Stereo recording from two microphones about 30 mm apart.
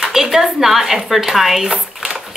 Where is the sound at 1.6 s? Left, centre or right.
Centre.